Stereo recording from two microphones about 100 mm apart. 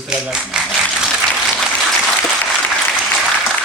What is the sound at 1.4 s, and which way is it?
Applause, centre (ahead or behind).